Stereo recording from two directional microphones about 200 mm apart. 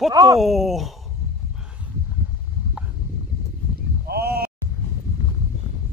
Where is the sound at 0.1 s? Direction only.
20° right (ahead or behind).